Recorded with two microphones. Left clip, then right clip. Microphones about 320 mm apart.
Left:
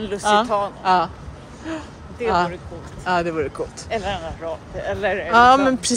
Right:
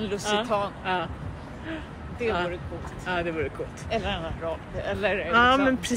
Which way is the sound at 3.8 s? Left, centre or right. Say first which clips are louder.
Left 3 dB; left.